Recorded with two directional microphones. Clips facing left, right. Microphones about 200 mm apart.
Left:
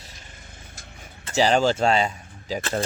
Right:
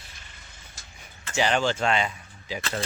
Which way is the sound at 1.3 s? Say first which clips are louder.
Left 5 dB; 35° left (ahead or behind).